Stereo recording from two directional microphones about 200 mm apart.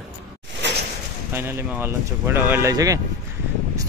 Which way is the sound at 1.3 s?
10° right (ahead or behind).